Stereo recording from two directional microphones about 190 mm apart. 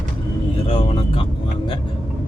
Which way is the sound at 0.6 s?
30° left (ahead or behind).